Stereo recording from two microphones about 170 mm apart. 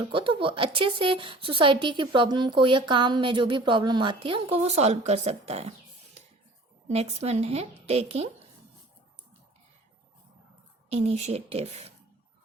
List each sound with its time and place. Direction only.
0.0 s speech: 30° right (ahead or behind)
6.8 s speech: 40° right (ahead or behind)
10.8 s speech: 40° right (ahead or behind)